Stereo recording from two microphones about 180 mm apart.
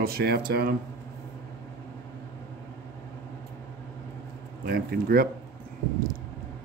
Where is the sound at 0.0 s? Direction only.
60° right (ahead or behind).